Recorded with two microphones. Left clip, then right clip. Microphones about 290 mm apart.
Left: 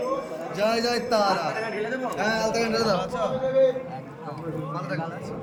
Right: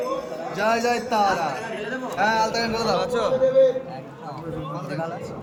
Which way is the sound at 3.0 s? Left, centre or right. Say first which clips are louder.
Right 4 dB; centre.